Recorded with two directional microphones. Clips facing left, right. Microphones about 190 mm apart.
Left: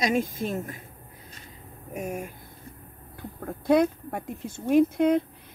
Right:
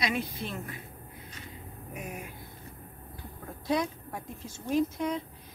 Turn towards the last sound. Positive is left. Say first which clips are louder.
# left 9 dB
turn(degrees=60)  # may be behind; listen again after turning